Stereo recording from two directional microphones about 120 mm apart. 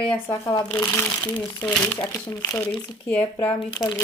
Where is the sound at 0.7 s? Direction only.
20° left (ahead or behind).